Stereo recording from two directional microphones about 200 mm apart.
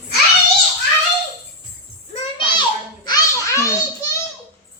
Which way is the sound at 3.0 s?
15° left (ahead or behind).